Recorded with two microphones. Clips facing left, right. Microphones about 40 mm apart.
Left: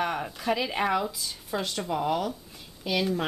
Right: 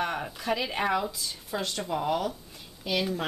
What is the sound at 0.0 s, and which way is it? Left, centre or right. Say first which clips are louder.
Speech: left 2 dB; centre.